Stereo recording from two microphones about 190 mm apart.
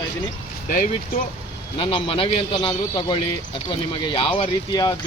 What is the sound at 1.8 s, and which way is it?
A man's voice, 30° left (ahead or behind).